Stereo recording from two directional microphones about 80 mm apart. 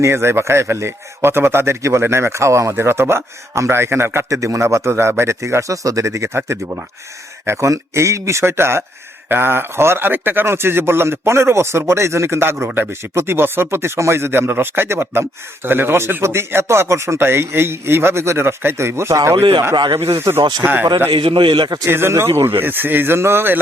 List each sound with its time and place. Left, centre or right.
0.0 s a man's voice: right
19.7 s a man's voice: right
20.6 s a man's voice: right
21.1 s a man's voice: right
21.8 s a man's voice: right